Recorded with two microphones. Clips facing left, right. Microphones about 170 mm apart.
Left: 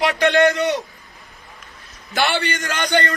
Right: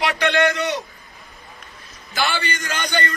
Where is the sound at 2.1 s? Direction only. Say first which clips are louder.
Left 3 dB; 65° left (ahead or behind).